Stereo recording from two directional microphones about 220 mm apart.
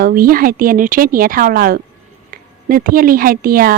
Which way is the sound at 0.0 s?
40° right (ahead or behind).